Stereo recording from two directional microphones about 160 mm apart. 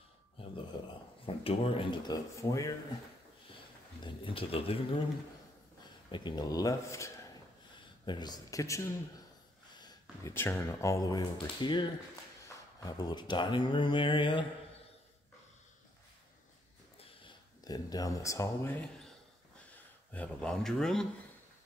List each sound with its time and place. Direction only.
1.2 s speech: 40° left (ahead or behind); by 2.7 s 20° left (ahead or behind)
4.0 s speech: 35° left (ahead or behind)
6.1 s speech: 25° left (ahead or behind)
9.8 s a sound: 25° left (ahead or behind)
10.3 s speech: 15° left (ahead or behind); by 14.4 s 30° left (ahead or behind)
17.2 s speech: 25° left (ahead or behind); by 21.1 s 5° left (ahead or behind)